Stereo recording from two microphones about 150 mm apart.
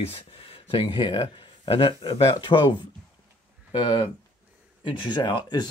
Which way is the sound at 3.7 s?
35° left (ahead or behind).